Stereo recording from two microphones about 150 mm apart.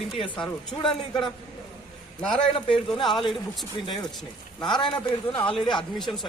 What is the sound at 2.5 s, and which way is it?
Speech, 35° left (ahead or behind).